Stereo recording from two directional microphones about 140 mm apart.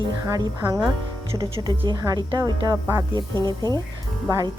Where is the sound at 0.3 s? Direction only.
25° right (ahead or behind).